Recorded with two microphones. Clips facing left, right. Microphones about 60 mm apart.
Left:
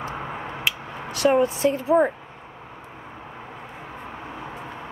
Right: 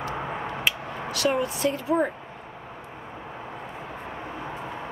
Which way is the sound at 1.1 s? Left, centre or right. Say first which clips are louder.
Left 6 dB; left.